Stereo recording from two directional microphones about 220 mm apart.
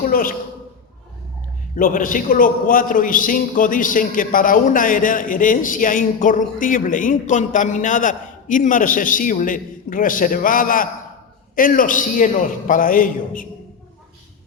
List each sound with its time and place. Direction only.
0.0 s a man's voice: 40° left (ahead or behind)
1.7 s a man's voice: 40° left (ahead or behind)